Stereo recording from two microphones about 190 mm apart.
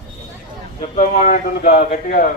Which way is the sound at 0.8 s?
40° left (ahead or behind).